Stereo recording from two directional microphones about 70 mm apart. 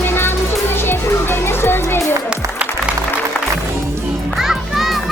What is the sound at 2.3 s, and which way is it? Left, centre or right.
Music, centre.